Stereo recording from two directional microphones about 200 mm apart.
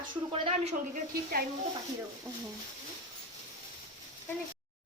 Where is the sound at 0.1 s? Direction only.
25° right (ahead or behind).